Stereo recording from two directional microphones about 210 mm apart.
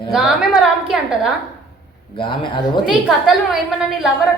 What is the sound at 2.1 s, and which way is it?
Speech, 20° left (ahead or behind).